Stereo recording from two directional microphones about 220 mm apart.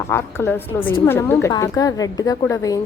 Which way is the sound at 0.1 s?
10° left (ahead or behind).